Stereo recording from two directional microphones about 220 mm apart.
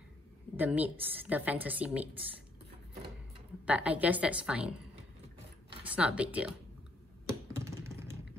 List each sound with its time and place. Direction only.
0.6 s a woman's voice: 5° right (ahead or behind)
3.6 s a woman's voice: 5° right (ahead or behind)
5.9 s a woman's voice: 5° right (ahead or behind)
7.2 s computer keyboard: 15° right (ahead or behind)